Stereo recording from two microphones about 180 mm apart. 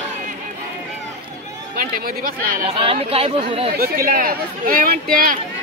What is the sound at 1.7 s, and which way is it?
Speech, 55° right (ahead or behind).